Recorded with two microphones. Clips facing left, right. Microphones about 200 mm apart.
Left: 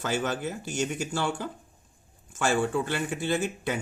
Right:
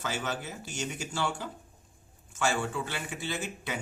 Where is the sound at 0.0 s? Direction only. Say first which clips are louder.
Left 6 dB; 50° left (ahead or behind).